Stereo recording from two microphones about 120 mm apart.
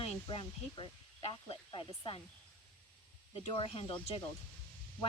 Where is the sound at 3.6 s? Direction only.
50° left (ahead or behind).